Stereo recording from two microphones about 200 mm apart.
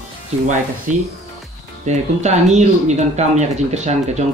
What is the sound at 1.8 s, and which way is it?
Speech, 35° right (ahead or behind).